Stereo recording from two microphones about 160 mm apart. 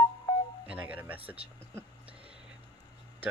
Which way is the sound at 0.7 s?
10° right (ahead or behind).